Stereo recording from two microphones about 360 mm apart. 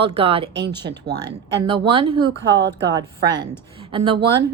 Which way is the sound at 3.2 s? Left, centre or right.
Right.